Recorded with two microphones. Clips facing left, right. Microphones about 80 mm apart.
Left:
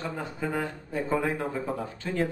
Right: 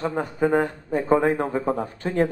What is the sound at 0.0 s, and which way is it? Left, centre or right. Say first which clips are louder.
A man's voice: right 9 dB; right.